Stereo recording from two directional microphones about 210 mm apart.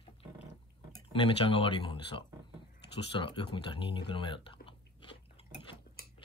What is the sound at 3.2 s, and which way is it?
Speech, 25° left (ahead or behind).